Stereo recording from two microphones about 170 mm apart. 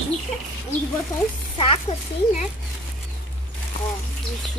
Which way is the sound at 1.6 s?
35° left (ahead or behind).